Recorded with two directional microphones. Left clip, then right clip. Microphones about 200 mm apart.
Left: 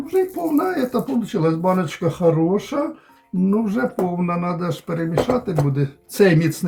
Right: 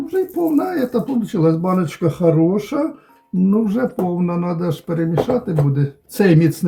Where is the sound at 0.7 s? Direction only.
10° right (ahead or behind).